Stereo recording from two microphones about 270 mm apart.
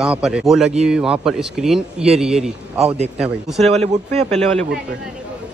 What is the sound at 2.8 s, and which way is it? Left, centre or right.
Speech, right.